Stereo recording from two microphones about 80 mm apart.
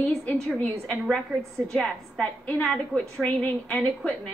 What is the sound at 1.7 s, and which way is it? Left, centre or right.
A woman's voice, centre.